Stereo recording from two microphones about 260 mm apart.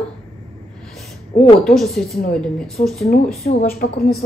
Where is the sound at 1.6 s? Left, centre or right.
Centre.